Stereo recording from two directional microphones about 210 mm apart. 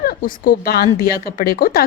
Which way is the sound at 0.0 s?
45° left (ahead or behind).